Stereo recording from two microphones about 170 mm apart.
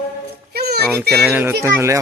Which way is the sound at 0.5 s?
70° right (ahead or behind).